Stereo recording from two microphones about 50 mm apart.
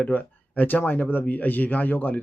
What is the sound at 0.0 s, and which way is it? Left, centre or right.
Speech, left.